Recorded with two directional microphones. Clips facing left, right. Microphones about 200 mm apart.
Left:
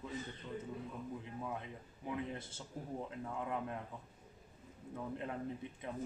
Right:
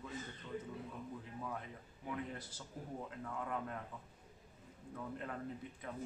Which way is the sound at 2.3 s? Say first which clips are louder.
Left 3 dB; 25° left (ahead or behind).